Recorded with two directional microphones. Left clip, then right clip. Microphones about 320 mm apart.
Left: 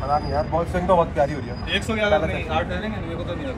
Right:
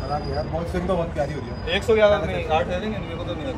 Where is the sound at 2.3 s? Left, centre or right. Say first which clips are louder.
Right 2 dB; centre.